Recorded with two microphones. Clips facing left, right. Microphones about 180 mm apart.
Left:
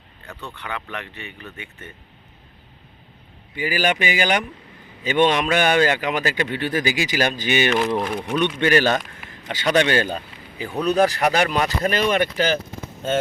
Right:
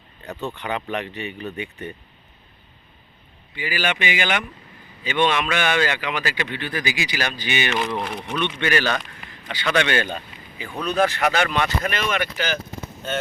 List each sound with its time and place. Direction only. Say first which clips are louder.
0.3 s speech: right 5 dB; 20° right (ahead or behind)
3.5 s a man's voice: left 4 dB; 45° left (ahead or behind)
7.9 s speech: left 4 dB; 5° left (ahead or behind)
8.4 s a man's voice: left 4 dB; 45° left (ahead or behind)